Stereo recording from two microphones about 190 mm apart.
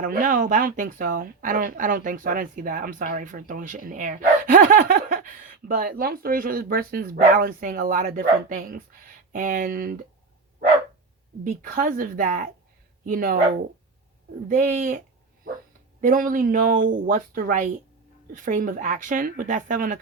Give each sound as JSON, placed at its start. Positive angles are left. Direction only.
{"t": 0.0, "sound": "speech", "side_deg": -45}
{"t": 11.4, "sound": "speech", "side_deg": -45}
{"t": 14.4, "sound": "speech", "side_deg": -45}